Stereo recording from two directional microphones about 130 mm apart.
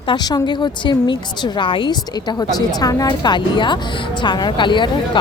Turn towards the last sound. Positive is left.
turn(degrees=35)  # may be behind; listen again after turning